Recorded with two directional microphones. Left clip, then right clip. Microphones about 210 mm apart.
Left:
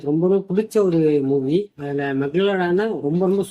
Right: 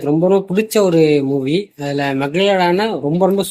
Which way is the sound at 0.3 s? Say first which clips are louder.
Right 5 dB; 15° right (ahead or behind).